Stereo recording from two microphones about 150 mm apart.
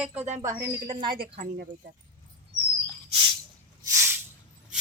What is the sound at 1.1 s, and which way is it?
Speech, 85° right.